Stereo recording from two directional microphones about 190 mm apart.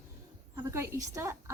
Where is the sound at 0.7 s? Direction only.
15° right (ahead or behind).